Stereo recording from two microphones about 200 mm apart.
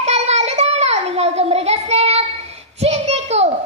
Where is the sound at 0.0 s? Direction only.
35° right (ahead or behind).